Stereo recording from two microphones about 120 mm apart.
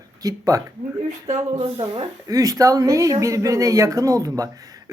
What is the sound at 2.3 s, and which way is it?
A woman's voice, 30° right (ahead or behind).